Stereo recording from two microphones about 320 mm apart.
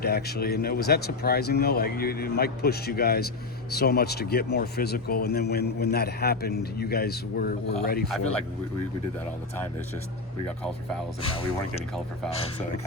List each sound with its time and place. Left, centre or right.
0.0 s speech: left
11.2 s speech: centre